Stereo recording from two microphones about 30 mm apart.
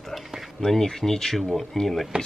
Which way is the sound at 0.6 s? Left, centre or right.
Centre.